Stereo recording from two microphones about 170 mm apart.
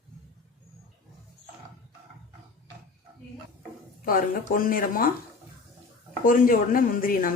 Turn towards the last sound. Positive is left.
turn(degrees=55)  # may be behind; listen again after turning